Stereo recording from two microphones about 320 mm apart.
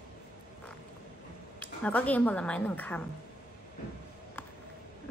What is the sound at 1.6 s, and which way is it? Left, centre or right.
Speech, centre.